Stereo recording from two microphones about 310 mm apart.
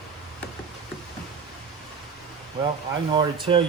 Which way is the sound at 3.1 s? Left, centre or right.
Centre.